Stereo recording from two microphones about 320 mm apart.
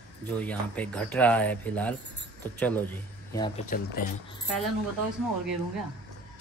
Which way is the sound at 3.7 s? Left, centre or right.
Left.